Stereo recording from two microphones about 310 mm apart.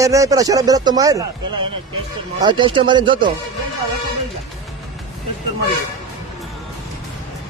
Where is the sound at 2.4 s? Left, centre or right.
Centre.